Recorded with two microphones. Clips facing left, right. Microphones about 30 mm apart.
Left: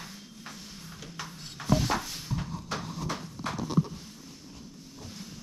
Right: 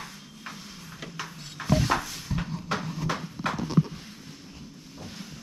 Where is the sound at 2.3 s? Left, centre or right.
Right.